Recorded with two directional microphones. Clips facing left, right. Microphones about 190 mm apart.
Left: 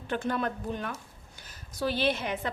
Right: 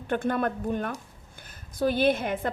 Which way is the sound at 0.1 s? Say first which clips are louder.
Right 4 dB; 55° right (ahead or behind).